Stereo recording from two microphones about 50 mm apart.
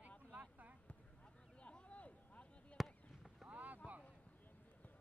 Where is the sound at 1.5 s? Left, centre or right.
Left.